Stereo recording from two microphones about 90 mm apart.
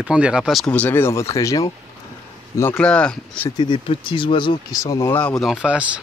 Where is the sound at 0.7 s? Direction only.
20° left (ahead or behind); by 1.7 s 40° left (ahead or behind).